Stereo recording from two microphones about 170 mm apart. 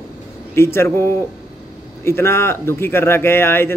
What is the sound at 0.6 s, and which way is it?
Speech, 15° left (ahead or behind).